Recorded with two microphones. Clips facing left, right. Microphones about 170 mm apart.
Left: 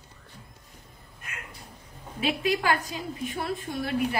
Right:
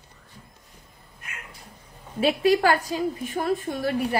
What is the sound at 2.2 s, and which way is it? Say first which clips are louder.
A woman's voice: right 7 dB; 40° right (ahead or behind).